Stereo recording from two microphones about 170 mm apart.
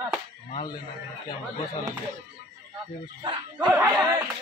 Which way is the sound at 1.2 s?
20° left (ahead or behind).